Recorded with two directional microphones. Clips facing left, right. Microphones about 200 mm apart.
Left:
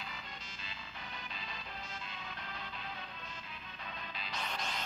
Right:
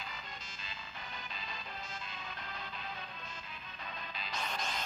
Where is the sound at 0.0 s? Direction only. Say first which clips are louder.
Right 1 dB; 40° right (ahead or behind).